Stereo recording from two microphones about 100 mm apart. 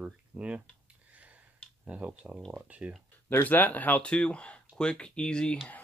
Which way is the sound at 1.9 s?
15° right (ahead or behind).